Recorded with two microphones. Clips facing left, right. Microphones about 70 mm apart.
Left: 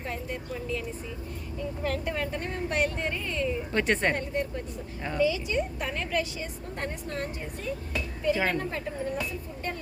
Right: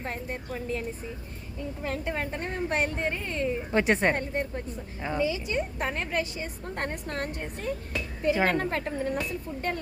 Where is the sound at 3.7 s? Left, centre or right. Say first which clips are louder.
Right 3 dB; centre.